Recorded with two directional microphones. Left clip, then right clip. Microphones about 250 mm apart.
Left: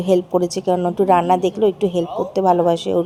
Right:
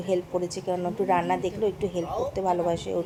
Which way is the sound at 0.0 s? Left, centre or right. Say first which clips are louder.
Left 10 dB; left.